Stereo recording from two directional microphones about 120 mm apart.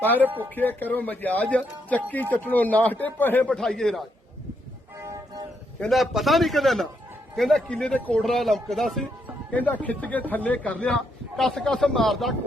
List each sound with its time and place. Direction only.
0.2 s speech: 15° right (ahead or behind)
0.5 s a man's voice: 15° left (ahead or behind)
5.8 s speech: centre (ahead or behind)
9.5 s a man's voice: 10° left (ahead or behind)